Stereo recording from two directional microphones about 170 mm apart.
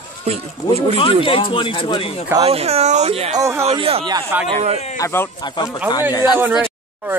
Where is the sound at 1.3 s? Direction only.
30° left (ahead or behind).